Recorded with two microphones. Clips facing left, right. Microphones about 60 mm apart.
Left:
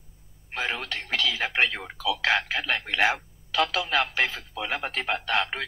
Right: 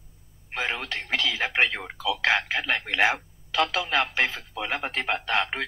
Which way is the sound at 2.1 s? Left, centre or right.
Centre.